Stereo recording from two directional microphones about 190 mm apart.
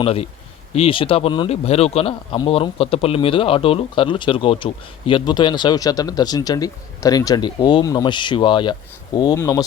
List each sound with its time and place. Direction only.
0.0 s speech: 30° left (ahead or behind); by 9.6 s 15° left (ahead or behind)